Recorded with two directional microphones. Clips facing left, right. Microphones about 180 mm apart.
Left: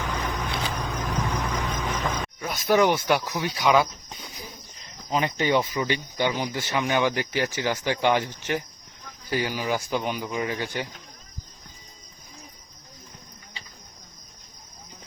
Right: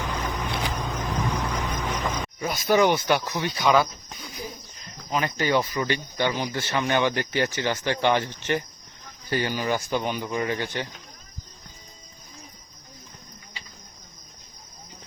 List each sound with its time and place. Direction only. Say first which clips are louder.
0.3 s vehicle: right 1 dB; 20° right (ahead or behind)
1.5 s music: even; 10° right (ahead or behind)
2.6 s speech: even; centre (ahead or behind)
5.1 s speech: left 1 dB; 20° left (ahead or behind); by 10.8 s 5° left (ahead or behind)